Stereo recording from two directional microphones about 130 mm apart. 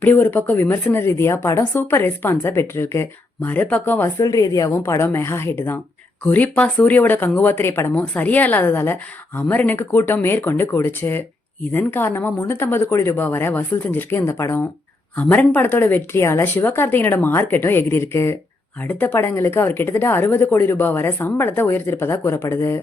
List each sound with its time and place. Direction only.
0.0 s a woman's voice: 15° left (ahead or behind)